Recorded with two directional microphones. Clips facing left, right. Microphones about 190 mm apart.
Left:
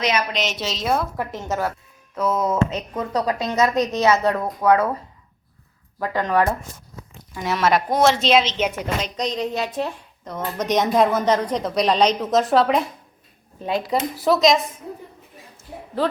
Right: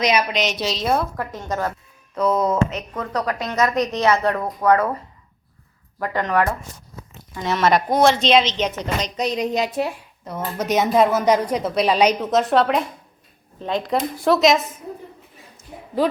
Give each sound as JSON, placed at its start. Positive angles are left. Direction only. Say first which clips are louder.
{"t": 0.0, "sound": "speech", "louder": "right 3 dB", "side_deg": -10}
{"t": 0.3, "sound": "a woman's voice", "louder": "right 3 dB", "side_deg": 0}
{"t": 1.1, "sound": "speech", "louder": "left 1 dB", "side_deg": 10}
{"t": 2.6, "sound": "a woman's voice", "louder": "even", "side_deg": 30}
{"t": 3.4, "sound": "a woman's voice", "louder": "even", "side_deg": 5}
{"t": 6.1, "sound": "a woman's voice", "louder": "left 1 dB", "side_deg": 10}
{"t": 9.1, "sound": "a woman's voice", "louder": "right 5 dB", "side_deg": -10}
{"t": 16.0, "sound": "speech", "louder": "right 2 dB", "side_deg": -10}